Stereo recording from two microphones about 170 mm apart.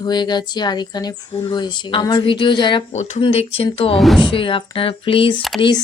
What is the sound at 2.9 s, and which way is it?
Speech, 40° left (ahead or behind).